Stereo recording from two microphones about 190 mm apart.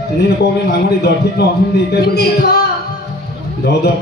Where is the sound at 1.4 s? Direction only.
60° left (ahead or behind).